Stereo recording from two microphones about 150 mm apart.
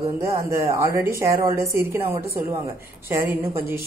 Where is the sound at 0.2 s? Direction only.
20° right (ahead or behind).